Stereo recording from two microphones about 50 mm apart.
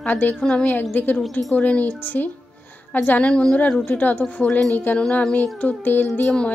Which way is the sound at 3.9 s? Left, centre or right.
Left.